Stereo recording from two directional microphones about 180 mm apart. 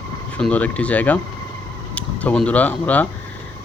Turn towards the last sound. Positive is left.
turn(degrees=10)  # may be behind; listen again after turning